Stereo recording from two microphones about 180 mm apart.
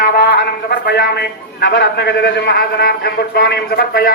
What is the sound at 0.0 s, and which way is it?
A man's voice, 55° left (ahead or behind).